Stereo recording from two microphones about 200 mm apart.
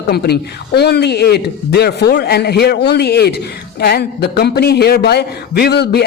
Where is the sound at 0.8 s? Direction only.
55° left (ahead or behind).